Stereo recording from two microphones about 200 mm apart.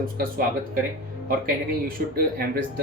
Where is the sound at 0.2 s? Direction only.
45° right (ahead or behind).